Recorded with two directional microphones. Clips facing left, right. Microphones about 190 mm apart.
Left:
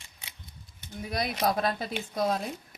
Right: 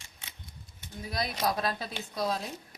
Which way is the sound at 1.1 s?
55° left (ahead or behind).